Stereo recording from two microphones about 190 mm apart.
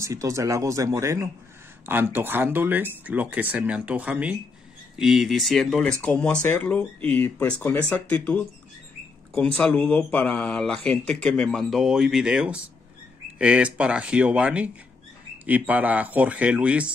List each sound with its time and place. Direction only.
0.0 s speech: 15° right (ahead or behind)